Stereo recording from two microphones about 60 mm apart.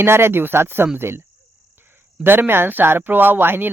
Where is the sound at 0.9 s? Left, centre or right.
Right.